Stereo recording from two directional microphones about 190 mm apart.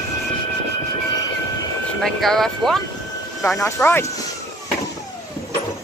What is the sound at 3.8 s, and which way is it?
Speech, 10° left (ahead or behind).